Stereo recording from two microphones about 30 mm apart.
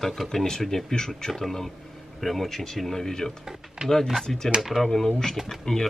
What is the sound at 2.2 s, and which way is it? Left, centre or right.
Speech, centre.